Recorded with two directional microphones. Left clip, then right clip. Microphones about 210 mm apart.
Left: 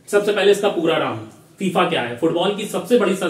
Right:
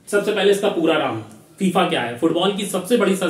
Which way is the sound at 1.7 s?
15° right (ahead or behind).